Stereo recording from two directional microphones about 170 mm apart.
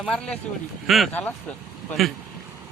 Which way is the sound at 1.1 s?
10° left (ahead or behind).